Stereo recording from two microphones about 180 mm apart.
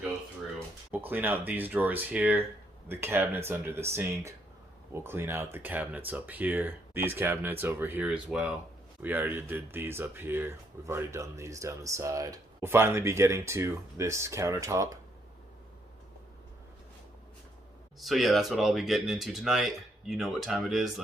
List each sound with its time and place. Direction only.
0.9 s speech: 10° right (ahead or behind)
18.0 s speech: centre (ahead or behind)